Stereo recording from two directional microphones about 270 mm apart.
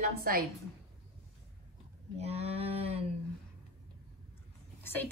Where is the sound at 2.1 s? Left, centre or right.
Right.